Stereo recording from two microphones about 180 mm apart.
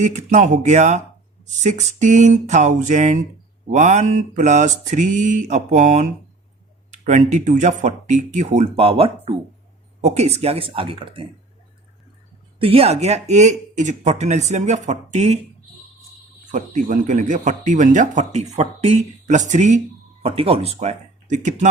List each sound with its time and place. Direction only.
0.0 s speech: 40° right (ahead or behind)
1.6 s mantra: 45° right (ahead or behind)
6.9 s speech: 40° right (ahead or behind)
12.5 s speech: 30° right (ahead or behind)
16.5 s speech: 45° right (ahead or behind)